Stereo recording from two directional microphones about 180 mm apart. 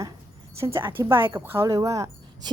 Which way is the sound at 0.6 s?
15° right (ahead or behind).